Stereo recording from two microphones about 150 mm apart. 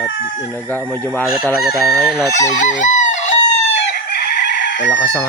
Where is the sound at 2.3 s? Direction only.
55° left (ahead or behind).